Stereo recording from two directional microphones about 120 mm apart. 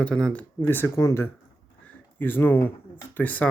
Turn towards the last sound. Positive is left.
turn(degrees=15)  # may be behind; listen again after turning